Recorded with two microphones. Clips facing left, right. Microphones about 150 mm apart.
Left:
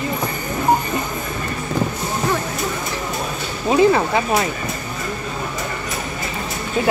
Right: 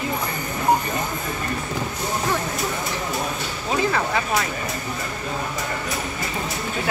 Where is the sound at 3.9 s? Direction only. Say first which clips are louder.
Left 5 dB; 25° left (ahead or behind).